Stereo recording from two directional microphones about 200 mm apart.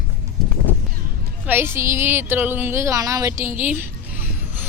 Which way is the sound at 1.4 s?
10° right (ahead or behind).